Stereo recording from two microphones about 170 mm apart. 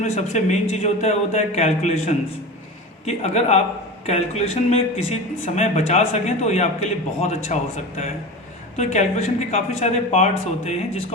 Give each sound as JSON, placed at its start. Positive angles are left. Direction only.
{"t": 0.0, "sound": "a woman's voice", "side_deg": 45}